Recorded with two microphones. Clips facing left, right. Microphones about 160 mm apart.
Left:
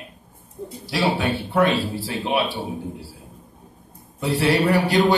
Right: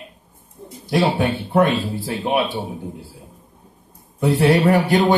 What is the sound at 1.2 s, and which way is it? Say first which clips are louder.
Speech: right 3 dB; 50° right (ahead or behind).